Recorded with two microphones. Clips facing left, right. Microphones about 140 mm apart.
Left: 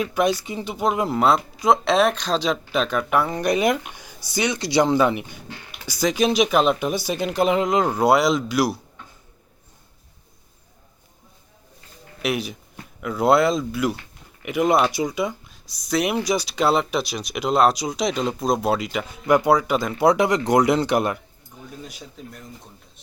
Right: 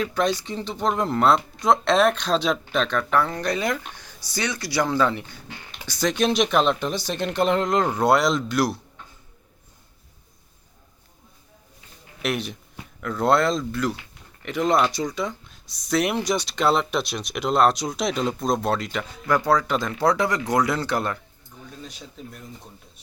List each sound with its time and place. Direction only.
0.0 s speech: 10° left (ahead or behind)
12.2 s speech: 5° left (ahead or behind)
22.2 s speech: centre (ahead or behind)